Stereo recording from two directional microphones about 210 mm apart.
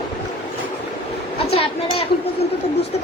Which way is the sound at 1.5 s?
30° left (ahead or behind).